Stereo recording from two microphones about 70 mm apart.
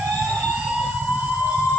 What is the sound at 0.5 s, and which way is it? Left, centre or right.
Emergency vehicle, centre.